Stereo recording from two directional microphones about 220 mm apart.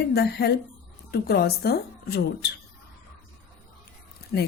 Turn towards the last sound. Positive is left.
turn(degrees=50)  # may be behind; listen again after turning